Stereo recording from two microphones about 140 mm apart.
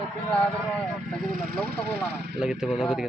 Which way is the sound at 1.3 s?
90° right.